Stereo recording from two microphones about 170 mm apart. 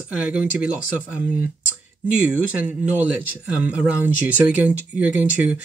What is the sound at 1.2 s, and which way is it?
Speech, 55° left (ahead or behind).